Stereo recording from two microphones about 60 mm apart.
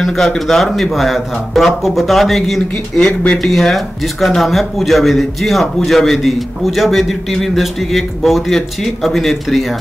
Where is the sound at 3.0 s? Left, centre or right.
Centre.